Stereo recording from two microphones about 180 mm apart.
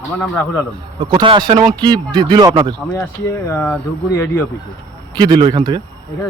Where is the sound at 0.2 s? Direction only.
10° left (ahead or behind).